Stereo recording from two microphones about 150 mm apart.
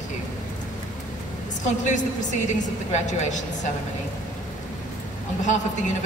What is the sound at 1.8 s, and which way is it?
A woman's voice, 55° left (ahead or behind).